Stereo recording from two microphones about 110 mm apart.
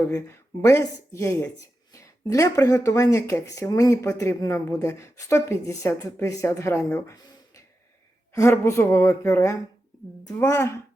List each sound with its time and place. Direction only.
0.1 s a woman's voice: 25° left (ahead or behind)
8.3 s a woman's voice: 25° left (ahead or behind)